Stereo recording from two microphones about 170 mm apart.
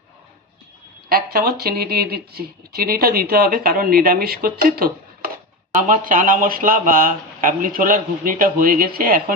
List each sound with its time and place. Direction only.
1.1 s speech: 65° right (ahead or behind)
5.7 s speech: 50° right (ahead or behind)